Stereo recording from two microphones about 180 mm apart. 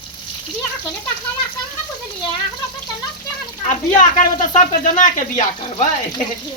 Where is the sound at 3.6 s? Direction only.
45° left (ahead or behind).